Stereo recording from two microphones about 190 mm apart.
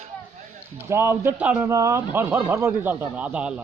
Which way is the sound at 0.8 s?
10° right (ahead or behind).